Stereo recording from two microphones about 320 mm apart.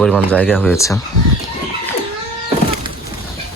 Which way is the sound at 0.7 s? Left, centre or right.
Centre.